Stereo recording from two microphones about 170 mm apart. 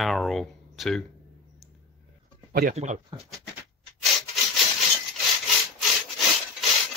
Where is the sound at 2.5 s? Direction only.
60° right (ahead or behind).